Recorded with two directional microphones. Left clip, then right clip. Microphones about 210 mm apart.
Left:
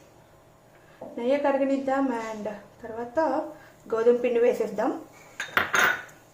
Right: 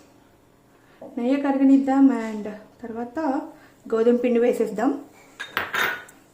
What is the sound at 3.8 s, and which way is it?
A woman's voice, 45° right (ahead or behind).